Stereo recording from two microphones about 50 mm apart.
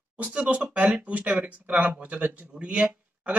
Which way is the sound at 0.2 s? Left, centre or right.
Right.